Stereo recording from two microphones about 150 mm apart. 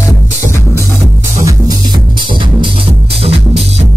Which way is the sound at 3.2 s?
40° right (ahead or behind).